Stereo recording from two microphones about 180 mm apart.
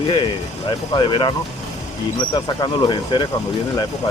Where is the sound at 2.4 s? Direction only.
25° left (ahead or behind).